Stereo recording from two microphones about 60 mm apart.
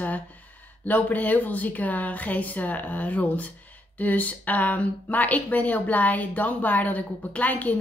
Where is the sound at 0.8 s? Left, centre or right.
Left.